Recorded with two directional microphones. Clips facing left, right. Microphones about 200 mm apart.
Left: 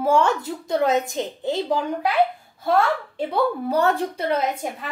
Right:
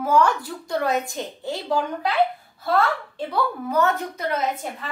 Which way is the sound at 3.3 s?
30° left (ahead or behind).